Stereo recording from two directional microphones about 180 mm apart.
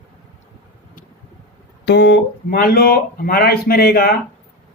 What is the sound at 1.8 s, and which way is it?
Speech, 70° left (ahead or behind).